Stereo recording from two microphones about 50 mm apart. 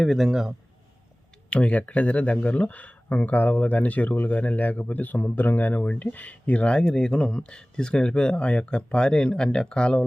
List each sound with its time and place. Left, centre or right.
0.0 s speech: centre
1.5 s speech: left